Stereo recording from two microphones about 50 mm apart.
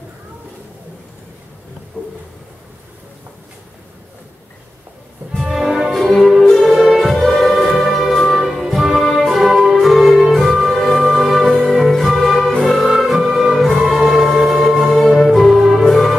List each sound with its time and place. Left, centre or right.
2.0 s a sound: left
5.4 s music: centre
11.5 s music: centre
15.8 s music: centre